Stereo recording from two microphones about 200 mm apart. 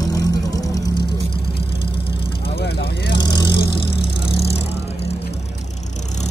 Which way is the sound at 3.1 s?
20° left (ahead or behind).